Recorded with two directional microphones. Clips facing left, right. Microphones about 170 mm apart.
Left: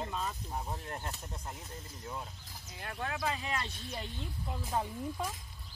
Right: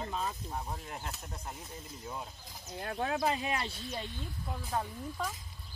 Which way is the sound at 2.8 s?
40° right (ahead or behind).